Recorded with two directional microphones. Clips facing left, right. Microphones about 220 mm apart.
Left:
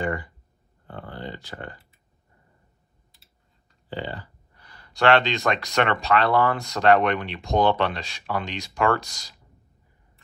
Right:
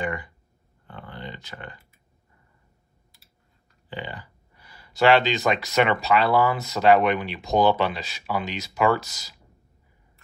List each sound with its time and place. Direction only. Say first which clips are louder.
1.3 s speech: left 3 dB; 20° right (ahead or behind)
3.9 s speech: left 3 dB; 15° right (ahead or behind)